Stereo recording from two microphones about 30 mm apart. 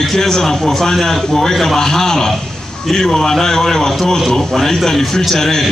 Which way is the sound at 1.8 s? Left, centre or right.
Centre.